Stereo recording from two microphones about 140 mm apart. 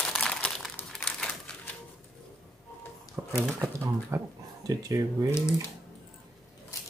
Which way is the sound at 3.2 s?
15° right (ahead or behind).